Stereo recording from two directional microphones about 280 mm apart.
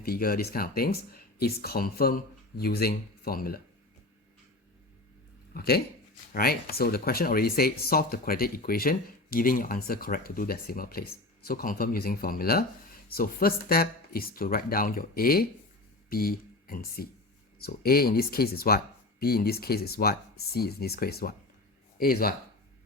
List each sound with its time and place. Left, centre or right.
0.0 s speech: left
5.5 s speech: left